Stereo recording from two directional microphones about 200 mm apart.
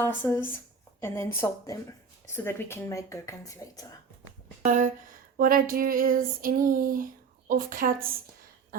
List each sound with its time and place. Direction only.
0.0 s speech: 10° left (ahead or behind)
4.6 s speech: 40° right (ahead or behind)
5.4 s female singing: 45° right (ahead or behind)